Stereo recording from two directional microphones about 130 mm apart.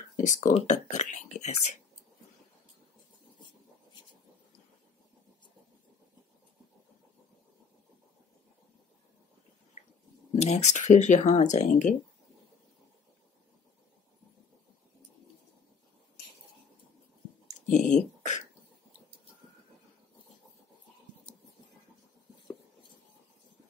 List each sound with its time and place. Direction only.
0.2 s speech: 80° left
0.6 s speech: 60° left (ahead or behind)
10.3 s speech: 60° left (ahead or behind)
17.6 s speech: 70° left (ahead or behind)